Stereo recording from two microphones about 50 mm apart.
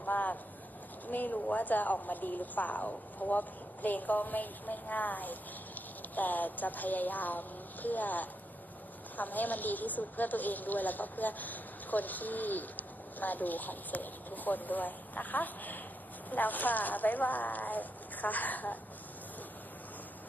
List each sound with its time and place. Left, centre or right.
0.0 s vehicle: left
1.0 s a woman's voice: left